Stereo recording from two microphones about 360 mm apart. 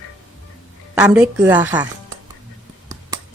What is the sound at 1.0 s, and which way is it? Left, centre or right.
Speech, centre.